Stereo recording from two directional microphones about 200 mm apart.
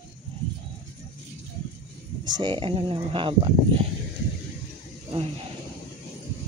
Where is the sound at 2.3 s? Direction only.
25° right (ahead or behind).